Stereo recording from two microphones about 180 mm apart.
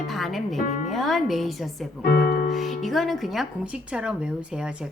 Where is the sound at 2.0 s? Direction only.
55° left (ahead or behind).